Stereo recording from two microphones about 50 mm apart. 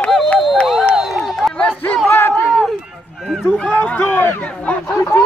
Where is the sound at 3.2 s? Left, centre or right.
Centre.